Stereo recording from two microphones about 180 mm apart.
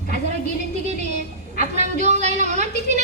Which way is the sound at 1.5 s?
40° right (ahead or behind).